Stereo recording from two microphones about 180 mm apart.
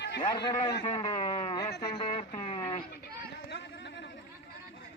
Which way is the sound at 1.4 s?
20° left (ahead or behind).